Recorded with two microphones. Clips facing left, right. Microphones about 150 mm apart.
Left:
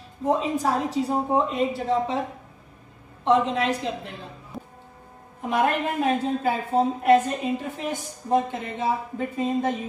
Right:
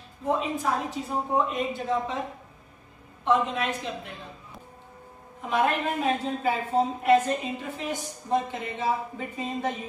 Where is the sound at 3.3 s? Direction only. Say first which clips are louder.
Left 4 dB; 30° left (ahead or behind).